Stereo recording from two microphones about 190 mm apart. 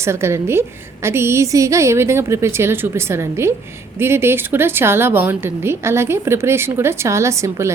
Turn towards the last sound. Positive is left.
turn(degrees=-15)  # may be behind; listen again after turning